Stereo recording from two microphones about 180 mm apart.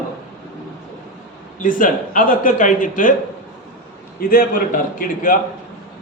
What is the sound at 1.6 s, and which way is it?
A man's voice, 45° left (ahead or behind).